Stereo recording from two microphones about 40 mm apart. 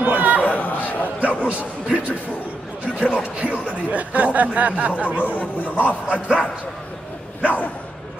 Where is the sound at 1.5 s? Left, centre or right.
Right.